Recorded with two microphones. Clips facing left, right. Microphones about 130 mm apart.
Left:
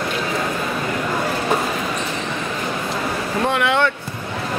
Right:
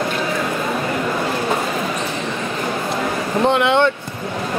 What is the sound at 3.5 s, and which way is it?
Speech, 25° right (ahead or behind).